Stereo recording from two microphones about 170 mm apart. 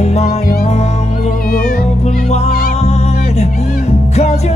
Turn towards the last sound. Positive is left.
turn(degrees=40)  # may be behind; listen again after turning